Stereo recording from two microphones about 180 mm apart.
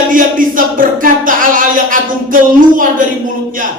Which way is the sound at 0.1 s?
50° right (ahead or behind).